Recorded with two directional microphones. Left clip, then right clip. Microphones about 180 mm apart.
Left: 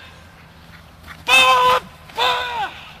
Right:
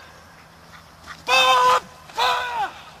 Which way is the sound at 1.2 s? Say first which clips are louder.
Left 4 dB; 20° right (ahead or behind).